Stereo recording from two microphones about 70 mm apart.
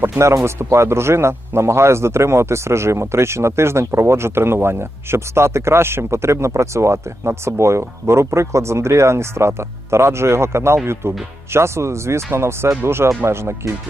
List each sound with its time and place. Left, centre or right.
0.0 s speech: right